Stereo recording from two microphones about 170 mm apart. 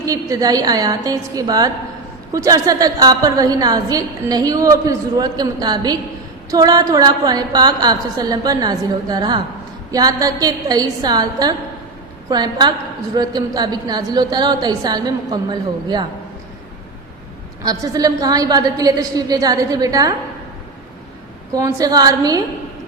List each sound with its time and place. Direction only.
0.0 s a woman's voice: 20° right (ahead or behind)
17.6 s a woman's voice: 20° right (ahead or behind)
21.5 s a woman's voice: 20° right (ahead or behind)